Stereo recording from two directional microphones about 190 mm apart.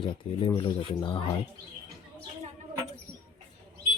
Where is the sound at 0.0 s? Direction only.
25° left (ahead or behind).